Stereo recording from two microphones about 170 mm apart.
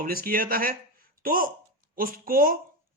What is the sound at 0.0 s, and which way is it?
Speech, 60° right (ahead or behind).